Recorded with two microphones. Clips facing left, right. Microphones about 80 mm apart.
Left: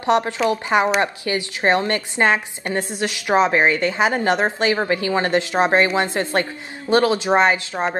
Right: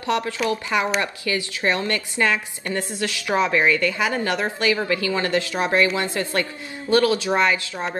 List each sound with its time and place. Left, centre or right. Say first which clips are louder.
0.0 s a woman's voice: left 5 dB; left